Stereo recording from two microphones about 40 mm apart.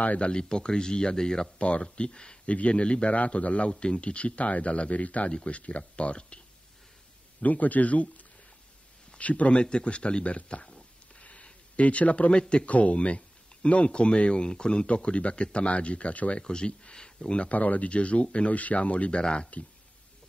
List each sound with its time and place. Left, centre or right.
0.0 s speech: left
0.3 s speech: left
1.6 s speech: left
7.4 s speech: left
12.3 s speech: left
17.5 s speech: left